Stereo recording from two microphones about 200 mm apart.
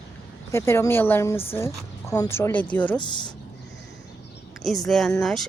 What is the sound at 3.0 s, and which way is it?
Speech, 20° left (ahead or behind).